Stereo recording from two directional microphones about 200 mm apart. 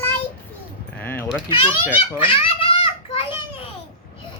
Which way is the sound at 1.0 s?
10° left (ahead or behind).